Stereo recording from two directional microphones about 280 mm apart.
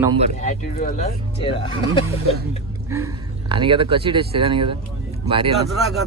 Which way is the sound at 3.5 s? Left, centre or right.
Centre.